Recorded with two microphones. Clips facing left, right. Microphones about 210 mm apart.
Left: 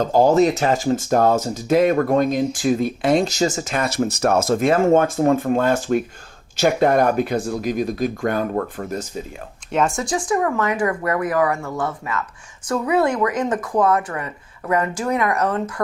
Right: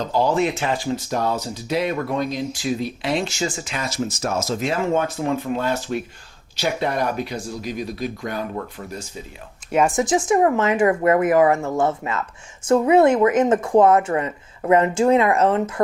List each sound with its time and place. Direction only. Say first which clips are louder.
0.0 s speech: left 5 dB; 45° left (ahead or behind)
9.7 s speech: right 2 dB; 15° right (ahead or behind)